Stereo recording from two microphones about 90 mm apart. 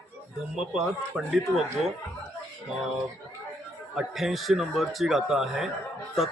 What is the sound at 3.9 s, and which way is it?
Speech, centre (ahead or behind).